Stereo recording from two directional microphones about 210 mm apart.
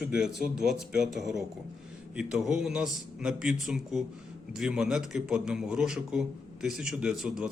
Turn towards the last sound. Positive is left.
turn(degrees=-5)  # may be behind; listen again after turning